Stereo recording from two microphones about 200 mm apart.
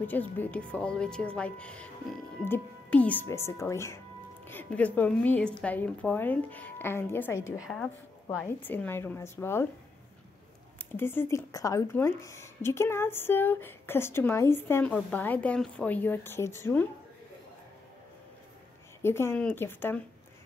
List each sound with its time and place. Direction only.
0.0 s speech: 10° left (ahead or behind)
7.5 s speech: centre (ahead or behind)
10.8 s speech: 10° left (ahead or behind)
19.0 s speech: 10° left (ahead or behind)